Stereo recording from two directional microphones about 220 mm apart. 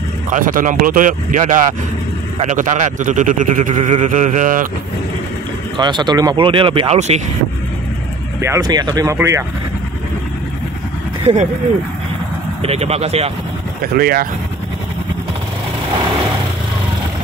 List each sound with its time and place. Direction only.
0.3 s speech: 40° right (ahead or behind)
5.8 s speech: 20° right (ahead or behind)
8.4 s speech: 15° right (ahead or behind)
12.6 s speech: 30° right (ahead or behind)
13.9 s speech: 45° right (ahead or behind)